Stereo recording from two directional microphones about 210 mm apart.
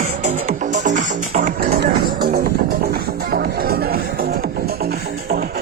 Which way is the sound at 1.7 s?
50° right (ahead or behind).